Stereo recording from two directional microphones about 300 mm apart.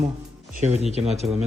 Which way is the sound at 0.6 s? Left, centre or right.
Right.